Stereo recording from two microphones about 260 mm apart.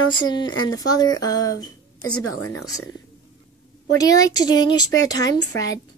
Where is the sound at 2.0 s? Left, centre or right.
Left.